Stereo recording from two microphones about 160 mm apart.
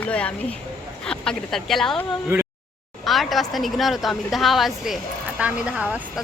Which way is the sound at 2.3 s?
15° right (ahead or behind).